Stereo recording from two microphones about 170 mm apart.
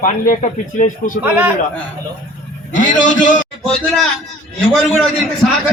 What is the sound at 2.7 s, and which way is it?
Speech, 50° left (ahead or behind).